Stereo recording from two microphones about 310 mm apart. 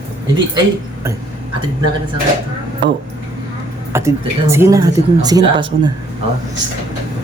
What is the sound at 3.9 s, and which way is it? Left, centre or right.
Speech, centre.